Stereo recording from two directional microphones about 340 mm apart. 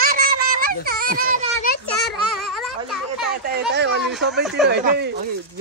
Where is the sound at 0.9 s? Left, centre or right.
Right.